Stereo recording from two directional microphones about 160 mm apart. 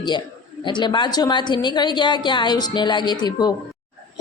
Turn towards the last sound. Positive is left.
turn(degrees=25)  # may be behind; listen again after turning